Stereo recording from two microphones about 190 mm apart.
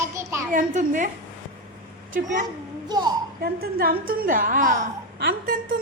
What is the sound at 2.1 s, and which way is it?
Speech, 45° right (ahead or behind).